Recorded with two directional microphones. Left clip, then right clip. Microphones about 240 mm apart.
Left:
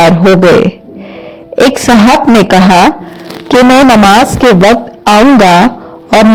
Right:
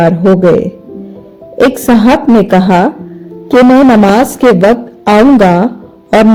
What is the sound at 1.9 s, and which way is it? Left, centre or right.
Speech, left.